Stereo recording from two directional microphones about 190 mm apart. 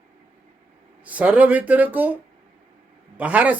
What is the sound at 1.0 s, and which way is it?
Speech, 10° right (ahead or behind).